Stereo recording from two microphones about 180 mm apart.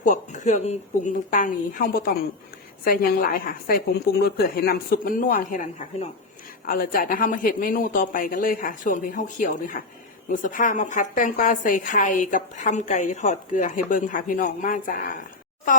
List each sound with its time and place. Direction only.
0.0 s a woman's voice: 45° left (ahead or behind)